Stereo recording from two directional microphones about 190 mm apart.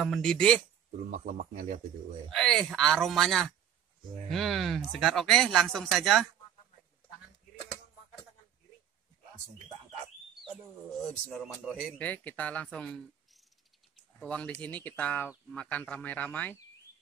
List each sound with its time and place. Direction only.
0.0 s speech: centre (ahead or behind)
1.1 s a man's voice: 45° right (ahead or behind)
2.2 s speech: 5° left (ahead or behind)
11.2 s speech: centre (ahead or behind)